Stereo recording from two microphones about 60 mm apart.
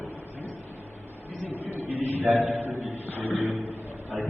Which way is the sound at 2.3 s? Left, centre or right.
Centre.